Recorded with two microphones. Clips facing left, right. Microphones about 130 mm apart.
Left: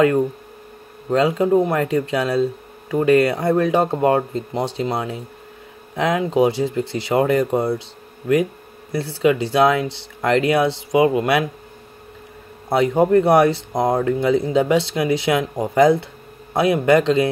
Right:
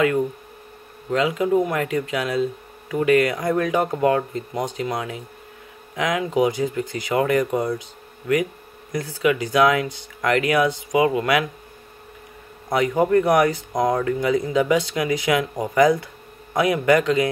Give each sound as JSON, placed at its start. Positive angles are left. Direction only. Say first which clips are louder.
{"t": 1.1, "sound": "speech", "louder": "left 3 dB", "side_deg": 35}
{"t": 9.2, "sound": "speech", "louder": "left 2 dB", "side_deg": 30}
{"t": 12.6, "sound": "speech", "louder": "left 3 dB", "side_deg": 25}